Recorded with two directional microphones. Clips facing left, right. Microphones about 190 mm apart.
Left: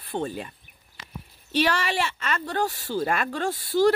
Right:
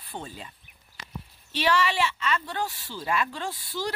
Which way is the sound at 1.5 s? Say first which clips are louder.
Left 1 dB; 45° left (ahead or behind).